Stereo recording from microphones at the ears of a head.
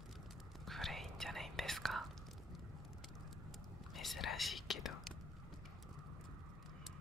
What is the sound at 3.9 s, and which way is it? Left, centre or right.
Whispering, left.